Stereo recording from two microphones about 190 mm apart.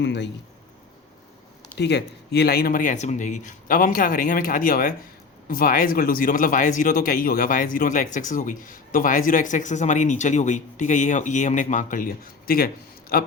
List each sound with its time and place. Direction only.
0.0 s speech: 65° left (ahead or behind)
1.7 s speech: 65° left (ahead or behind)